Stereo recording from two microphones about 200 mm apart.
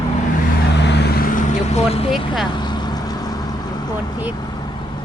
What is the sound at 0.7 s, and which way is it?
Vehicle, 55° left (ahead or behind).